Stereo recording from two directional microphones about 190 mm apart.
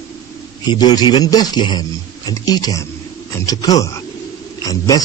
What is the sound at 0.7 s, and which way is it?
A man's voice, 20° left (ahead or behind).